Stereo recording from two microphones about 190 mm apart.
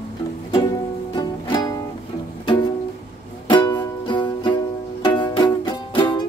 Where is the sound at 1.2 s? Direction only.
20° left (ahead or behind).